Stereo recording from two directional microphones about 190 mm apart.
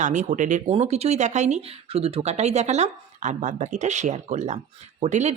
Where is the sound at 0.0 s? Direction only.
40° right (ahead or behind).